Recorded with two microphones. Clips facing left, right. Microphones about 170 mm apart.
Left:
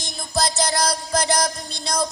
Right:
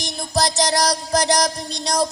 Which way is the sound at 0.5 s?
40° right (ahead or behind).